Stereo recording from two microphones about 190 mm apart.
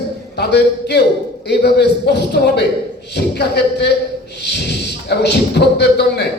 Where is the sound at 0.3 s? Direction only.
60° left (ahead or behind).